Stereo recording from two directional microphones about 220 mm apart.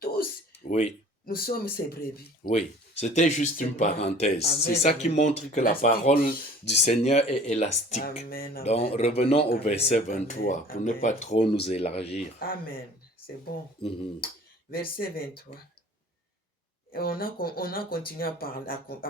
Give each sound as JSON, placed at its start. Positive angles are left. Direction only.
{"t": 0.0, "sound": "a sound", "side_deg": 35}
{"t": 1.2, "sound": "speech", "side_deg": 45}
{"t": 4.4, "sound": "speech", "side_deg": 45}
{"t": 4.8, "sound": "speech", "side_deg": 30}
{"t": 8.6, "sound": "speech", "side_deg": 25}
{"t": 12.4, "sound": "speech", "side_deg": 40}
{"t": 14.7, "sound": "speech", "side_deg": 40}
{"t": 16.9, "sound": "speech", "side_deg": 40}